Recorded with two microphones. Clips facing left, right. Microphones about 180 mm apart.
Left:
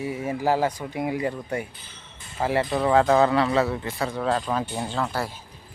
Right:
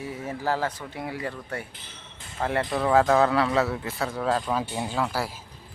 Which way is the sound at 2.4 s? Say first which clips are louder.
Left 3 dB; 5° left (ahead or behind).